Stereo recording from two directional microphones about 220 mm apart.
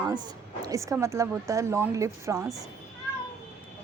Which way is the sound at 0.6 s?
15° right (ahead or behind).